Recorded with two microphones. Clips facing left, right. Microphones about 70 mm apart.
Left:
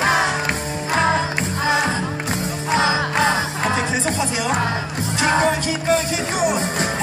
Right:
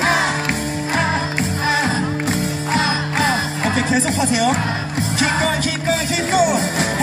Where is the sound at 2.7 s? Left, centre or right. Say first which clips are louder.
Left 2 dB; left.